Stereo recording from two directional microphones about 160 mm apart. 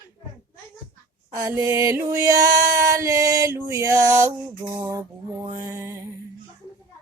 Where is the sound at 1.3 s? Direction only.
20° right (ahead or behind).